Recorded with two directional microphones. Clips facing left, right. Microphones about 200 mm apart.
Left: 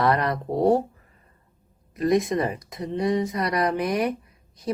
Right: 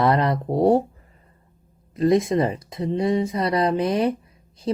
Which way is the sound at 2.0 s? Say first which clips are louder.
Right 3 dB; 25° right (ahead or behind).